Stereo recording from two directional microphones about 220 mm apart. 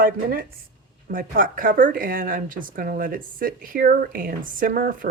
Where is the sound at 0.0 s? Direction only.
45° right (ahead or behind).